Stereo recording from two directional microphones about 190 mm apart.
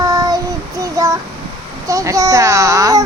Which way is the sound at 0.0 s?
20° right (ahead or behind).